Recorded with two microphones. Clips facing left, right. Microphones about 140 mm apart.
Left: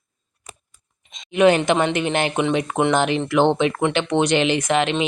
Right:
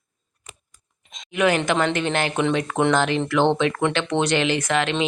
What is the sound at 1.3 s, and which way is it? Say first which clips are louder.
Speech: left 5 dB; 25° left (ahead or behind).